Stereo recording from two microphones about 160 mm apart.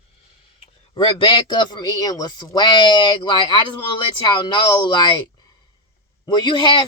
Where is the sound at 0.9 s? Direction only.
30° left (ahead or behind).